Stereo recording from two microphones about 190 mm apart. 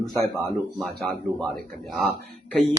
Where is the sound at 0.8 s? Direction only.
Centre (ahead or behind).